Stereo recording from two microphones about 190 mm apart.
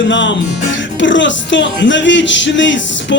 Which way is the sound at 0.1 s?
70° left (ahead or behind).